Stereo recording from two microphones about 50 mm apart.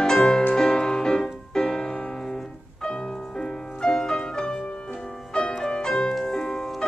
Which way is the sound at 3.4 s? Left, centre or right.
Centre.